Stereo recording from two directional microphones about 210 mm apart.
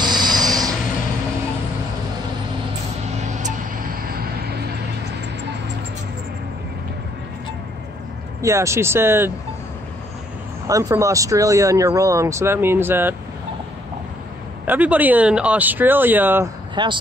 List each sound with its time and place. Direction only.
0.0 s a sound: 20° right (ahead or behind)
8.4 s speech: 15° right (ahead or behind)
10.7 s speech: 15° right (ahead or behind)
14.7 s speech: 5° right (ahead or behind)
16.7 s speech: 20° right (ahead or behind)